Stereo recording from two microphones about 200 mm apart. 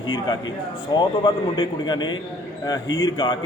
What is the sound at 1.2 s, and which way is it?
A man's voice, 20° left (ahead or behind).